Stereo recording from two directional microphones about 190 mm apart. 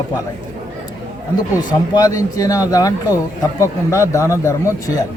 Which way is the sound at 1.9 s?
20° left (ahead or behind).